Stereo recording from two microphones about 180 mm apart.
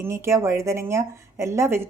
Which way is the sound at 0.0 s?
15° right (ahead or behind).